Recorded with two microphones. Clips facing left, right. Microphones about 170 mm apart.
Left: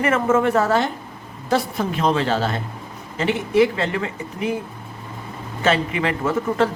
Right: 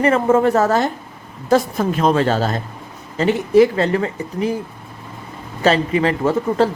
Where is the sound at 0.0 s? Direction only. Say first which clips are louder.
Right 4 dB; 35° right (ahead or behind).